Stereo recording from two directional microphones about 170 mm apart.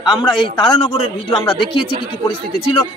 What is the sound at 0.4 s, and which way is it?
Speech, 30° left (ahead or behind).